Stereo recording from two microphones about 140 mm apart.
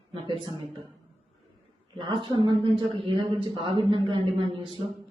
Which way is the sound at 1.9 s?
35° right (ahead or behind).